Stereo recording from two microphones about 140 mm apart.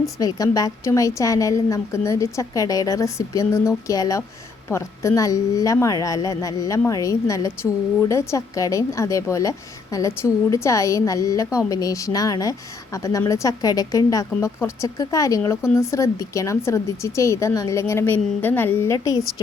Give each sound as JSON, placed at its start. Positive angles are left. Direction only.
{"t": 0.2, "sound": "a woman's voice", "side_deg": 25}
{"t": 19.1, "sound": "a woman's voice", "side_deg": -5}